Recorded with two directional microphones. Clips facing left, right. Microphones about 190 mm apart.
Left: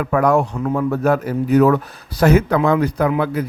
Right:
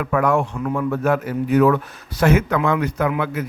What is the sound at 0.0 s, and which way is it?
A man's voice, 40° left (ahead or behind).